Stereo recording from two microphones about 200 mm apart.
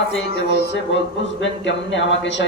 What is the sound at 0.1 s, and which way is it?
Speech, 60° left (ahead or behind).